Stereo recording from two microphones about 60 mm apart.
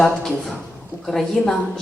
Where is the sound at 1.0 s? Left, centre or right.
Centre.